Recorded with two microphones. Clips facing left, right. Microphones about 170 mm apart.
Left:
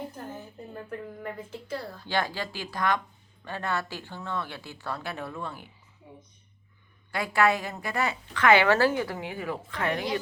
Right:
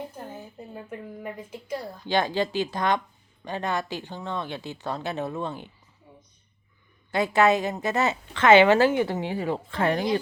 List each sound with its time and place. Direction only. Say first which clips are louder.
0.7 s a woman's voice: left 1 dB; 10° right (ahead or behind)
7.1 s a woman's voice: right 4 dB; 20° right (ahead or behind)